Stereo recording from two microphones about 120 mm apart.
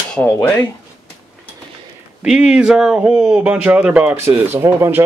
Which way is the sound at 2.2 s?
5° right (ahead or behind).